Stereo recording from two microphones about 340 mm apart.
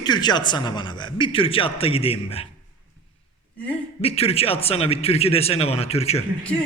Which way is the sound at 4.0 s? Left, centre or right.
Centre.